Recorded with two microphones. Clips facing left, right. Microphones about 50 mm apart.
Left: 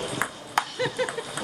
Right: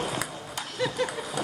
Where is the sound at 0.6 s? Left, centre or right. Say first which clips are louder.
Left 13 dB; left.